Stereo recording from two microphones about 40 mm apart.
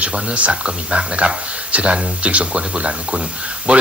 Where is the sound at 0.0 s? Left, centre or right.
Right.